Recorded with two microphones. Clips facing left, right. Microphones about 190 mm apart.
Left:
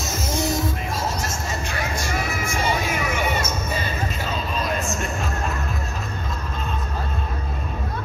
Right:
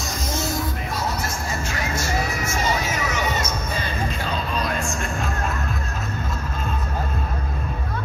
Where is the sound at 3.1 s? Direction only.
10° left (ahead or behind).